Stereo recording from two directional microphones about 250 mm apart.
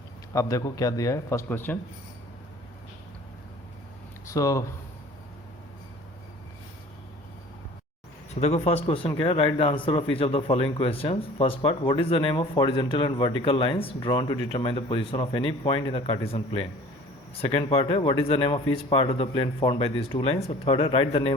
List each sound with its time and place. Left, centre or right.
0.3 s a man's voice: centre
4.3 s speech: centre
8.4 s speech: left